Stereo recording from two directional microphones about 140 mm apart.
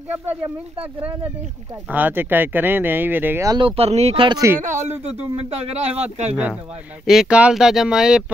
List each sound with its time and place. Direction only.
1.9 s speech: 15° right (ahead or behind)
3.5 s speech: 40° right (ahead or behind)
4.6 s speech: 60° right (ahead or behind)
5.0 s speech: 50° right (ahead or behind)
7.1 s speech: 5° right (ahead or behind)